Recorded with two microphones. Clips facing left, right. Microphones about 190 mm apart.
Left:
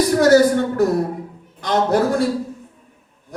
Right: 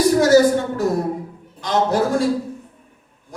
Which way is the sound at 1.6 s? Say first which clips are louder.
Left 1 dB; 55° left (ahead or behind).